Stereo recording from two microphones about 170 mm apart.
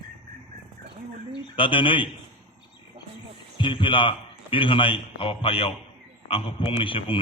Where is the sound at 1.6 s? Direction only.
30° left (ahead or behind).